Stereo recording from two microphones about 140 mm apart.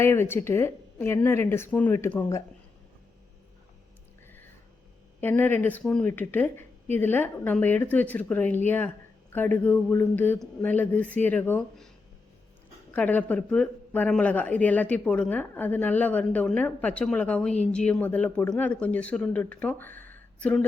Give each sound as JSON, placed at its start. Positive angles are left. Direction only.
{"t": 0.0, "sound": "speech", "side_deg": 15}
{"t": 5.2, "sound": "speech", "side_deg": 15}
{"t": 12.9, "sound": "speech", "side_deg": 10}